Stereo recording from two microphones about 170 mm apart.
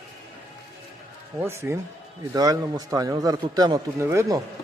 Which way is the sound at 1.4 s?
15° right (ahead or behind).